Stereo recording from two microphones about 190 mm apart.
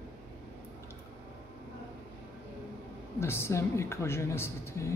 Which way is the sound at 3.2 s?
15° left (ahead or behind).